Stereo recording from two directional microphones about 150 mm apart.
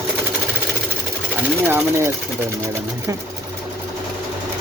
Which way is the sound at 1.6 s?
15° right (ahead or behind).